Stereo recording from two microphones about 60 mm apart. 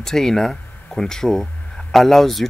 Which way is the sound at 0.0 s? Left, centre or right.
Centre.